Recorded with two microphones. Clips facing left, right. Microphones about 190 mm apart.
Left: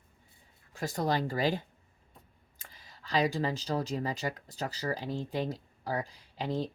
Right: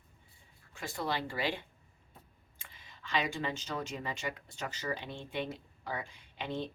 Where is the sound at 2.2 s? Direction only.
Centre (ahead or behind).